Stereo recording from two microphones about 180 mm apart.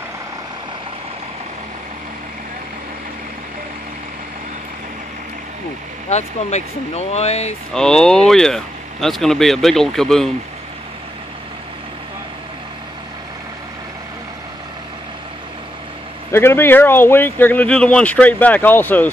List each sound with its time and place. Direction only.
6.0 s speech: 40° left (ahead or behind)
7.7 s speech: 5° left (ahead or behind)
16.3 s speech: 15° left (ahead or behind)